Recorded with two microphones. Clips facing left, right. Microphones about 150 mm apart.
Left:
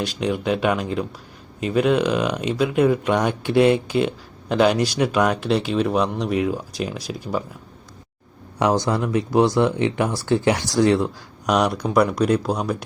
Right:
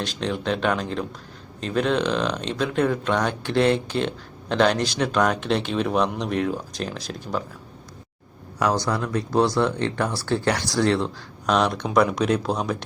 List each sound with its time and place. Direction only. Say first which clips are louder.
0.0 s speech: left 3 dB; 10° left (ahead or behind)
8.5 s speech: left 3 dB; 20° left (ahead or behind); by 12.7 s 5° left (ahead or behind)